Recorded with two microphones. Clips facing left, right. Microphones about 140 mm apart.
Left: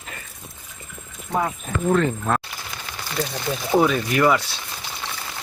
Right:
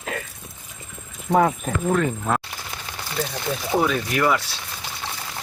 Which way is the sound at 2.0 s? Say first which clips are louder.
Left 1 dB; 10° right (ahead or behind).